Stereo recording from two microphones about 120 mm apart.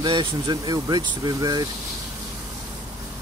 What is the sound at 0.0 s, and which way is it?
Speech, 40° right (ahead or behind).